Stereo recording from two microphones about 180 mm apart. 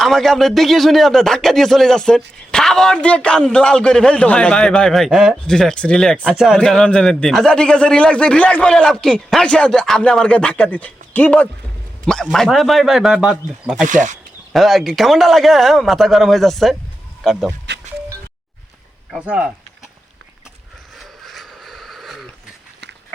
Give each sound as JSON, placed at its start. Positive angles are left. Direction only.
{"t": 0.0, "sound": "speech", "side_deg": 0}
{"t": 13.8, "sound": "speech", "side_deg": -45}
{"t": 14.5, "sound": "speech", "side_deg": 0}
{"t": 19.1, "sound": "speech", "side_deg": -5}
{"t": 21.0, "sound": "a sound", "side_deg": 0}